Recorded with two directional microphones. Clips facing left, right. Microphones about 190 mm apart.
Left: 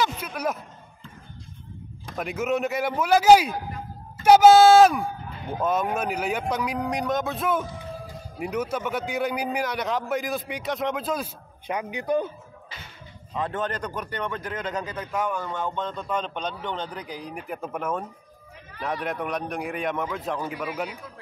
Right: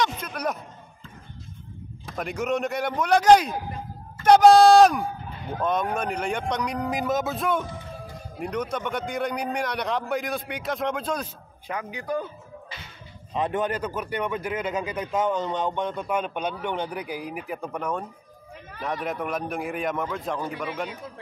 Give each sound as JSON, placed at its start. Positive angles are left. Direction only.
{"t": 0.0, "sound": "a sound", "side_deg": 5}
{"t": 2.0, "sound": "a man's voice", "side_deg": 0}
{"t": 11.6, "sound": "speech", "side_deg": 20}
{"t": 13.3, "sound": "a man's voice", "side_deg": -15}